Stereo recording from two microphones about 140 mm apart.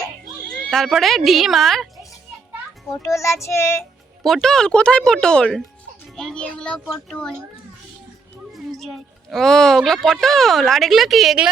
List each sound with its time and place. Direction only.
0.4 s neigh: 90° right
0.7 s speech: centre (ahead or behind)
2.9 s child singing: 20° left (ahead or behind)
4.2 s speech: centre (ahead or behind)
8.5 s speech: centre (ahead or behind)